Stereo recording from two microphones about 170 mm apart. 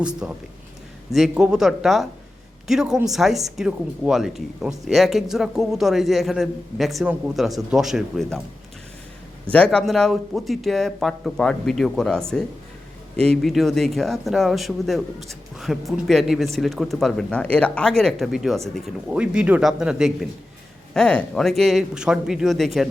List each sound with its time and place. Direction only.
0.2 s speech: 5° right (ahead or behind)
9.5 s speech: 5° left (ahead or behind)
13.2 s speech: 5° left (ahead or behind)